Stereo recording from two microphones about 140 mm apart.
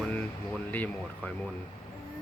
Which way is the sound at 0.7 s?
10° left (ahead or behind).